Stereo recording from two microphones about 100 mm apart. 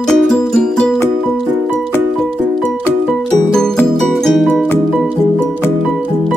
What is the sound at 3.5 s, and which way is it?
Music, 5° left (ahead or behind).